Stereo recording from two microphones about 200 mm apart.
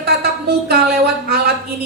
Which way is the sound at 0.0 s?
50° right (ahead or behind).